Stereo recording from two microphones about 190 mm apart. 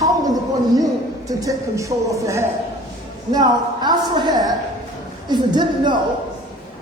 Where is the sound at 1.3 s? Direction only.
20° right (ahead or behind).